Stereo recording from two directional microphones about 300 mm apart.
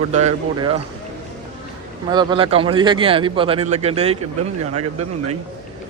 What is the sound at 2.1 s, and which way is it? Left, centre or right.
A man's voice, centre.